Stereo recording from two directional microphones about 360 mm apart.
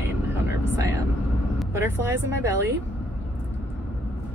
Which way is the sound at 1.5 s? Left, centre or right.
Centre.